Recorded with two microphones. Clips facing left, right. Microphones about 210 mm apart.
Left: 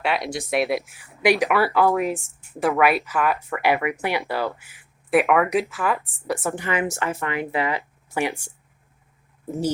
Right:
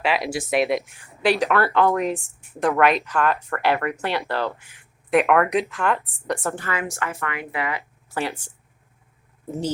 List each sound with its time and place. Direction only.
0.0 s speech: centre (ahead or behind)
6.6 s speech: 20° left (ahead or behind)
8.1 s speech: 15° left (ahead or behind)